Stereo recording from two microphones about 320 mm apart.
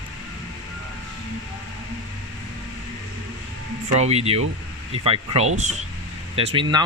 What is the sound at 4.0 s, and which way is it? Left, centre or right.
Speech, centre.